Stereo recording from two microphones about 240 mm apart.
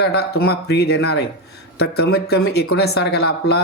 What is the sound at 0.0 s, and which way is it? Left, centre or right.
Speech, left.